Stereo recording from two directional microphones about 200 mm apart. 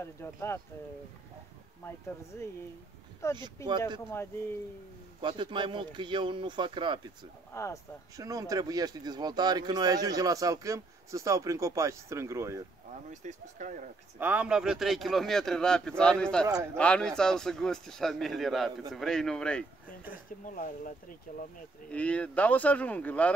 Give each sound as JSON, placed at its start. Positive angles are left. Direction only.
{"t": 0.0, "sound": "speech", "side_deg": 15}
{"t": 2.3, "sound": "speech", "side_deg": 10}
{"t": 5.2, "sound": "speech", "side_deg": -25}
{"t": 7.5, "sound": "speech", "side_deg": 15}
{"t": 8.2, "sound": "speech", "side_deg": -15}
{"t": 13.1, "sound": "speech", "side_deg": -40}
{"t": 14.2, "sound": "a man's voice", "side_deg": -5}
{"t": 20.4, "sound": "speech", "side_deg": 40}
{"t": 21.9, "sound": "speech", "side_deg": 5}